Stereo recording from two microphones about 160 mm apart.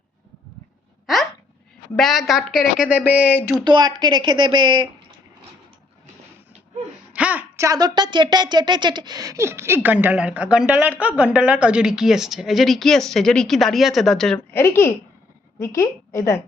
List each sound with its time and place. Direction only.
1.0 s a sound: centre (ahead or behind)
2.0 s a woman's voice: centre (ahead or behind)
3.6 s speech: 25° right (ahead or behind)
7.1 s speech: 10° right (ahead or behind)
14.5 s a woman's voice: 15° left (ahead or behind)